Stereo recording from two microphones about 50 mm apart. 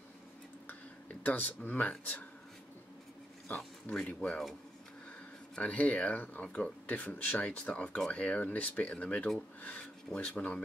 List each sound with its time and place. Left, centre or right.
1.2 s speech: left
3.5 s speech: left
4.3 s speech: centre
5.6 s speech: left
6.4 s speech: left
6.9 s speech: left
7.4 s speech: left